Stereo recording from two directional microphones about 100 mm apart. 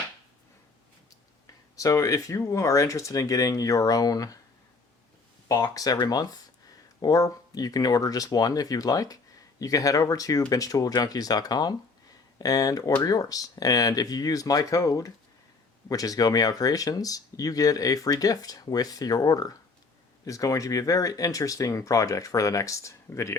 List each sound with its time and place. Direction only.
1.7 s speech: 35° left (ahead or behind)
5.5 s speech: 35° left (ahead or behind)